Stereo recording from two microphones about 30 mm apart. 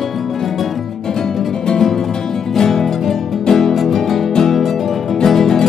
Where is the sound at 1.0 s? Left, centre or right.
Centre.